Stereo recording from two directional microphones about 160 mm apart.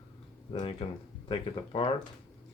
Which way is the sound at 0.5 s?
30° left (ahead or behind).